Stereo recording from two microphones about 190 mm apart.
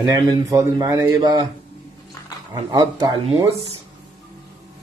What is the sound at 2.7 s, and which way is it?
Speech, 20° right (ahead or behind).